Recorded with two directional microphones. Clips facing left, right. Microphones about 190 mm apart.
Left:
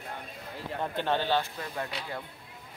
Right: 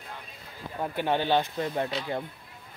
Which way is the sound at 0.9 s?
15° right (ahead or behind).